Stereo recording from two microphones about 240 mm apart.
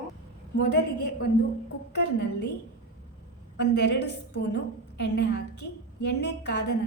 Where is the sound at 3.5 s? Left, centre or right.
Left.